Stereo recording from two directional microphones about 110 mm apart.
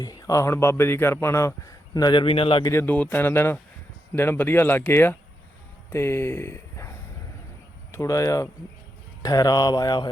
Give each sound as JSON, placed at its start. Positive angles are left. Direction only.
{"t": 0.0, "sound": "speech", "side_deg": 35}
{"t": 2.2, "sound": "speech", "side_deg": 55}
{"t": 2.6, "sound": "speech", "side_deg": 20}
{"t": 7.9, "sound": "a sound", "side_deg": 30}